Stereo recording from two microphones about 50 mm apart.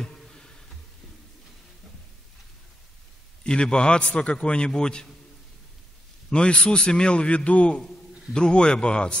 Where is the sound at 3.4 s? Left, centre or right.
Centre.